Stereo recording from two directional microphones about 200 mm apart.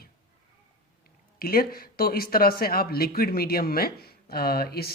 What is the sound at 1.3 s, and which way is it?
Speech, 50° left (ahead or behind).